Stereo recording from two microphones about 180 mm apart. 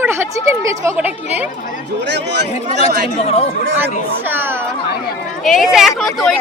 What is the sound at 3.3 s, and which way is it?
Speech, 35° left (ahead or behind).